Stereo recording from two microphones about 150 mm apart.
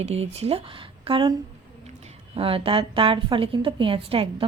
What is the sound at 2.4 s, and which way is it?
A woman's voice, 40° right (ahead or behind).